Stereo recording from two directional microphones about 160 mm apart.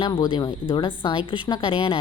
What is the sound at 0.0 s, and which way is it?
A woman's voice, 30° left (ahead or behind).